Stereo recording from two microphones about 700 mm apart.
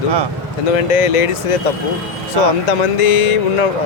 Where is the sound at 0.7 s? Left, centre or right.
Left.